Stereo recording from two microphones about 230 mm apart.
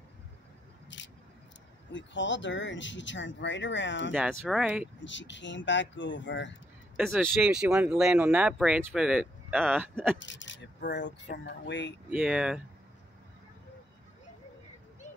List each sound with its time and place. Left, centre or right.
0.8 s vehicle: left
1.9 s speech: left
4.1 s speech: centre
5.0 s speech: left
7.2 s speech: centre
10.1 s speech: left
12.1 s speech: centre